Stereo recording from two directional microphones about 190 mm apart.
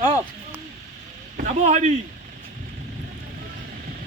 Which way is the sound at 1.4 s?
40° right (ahead or behind).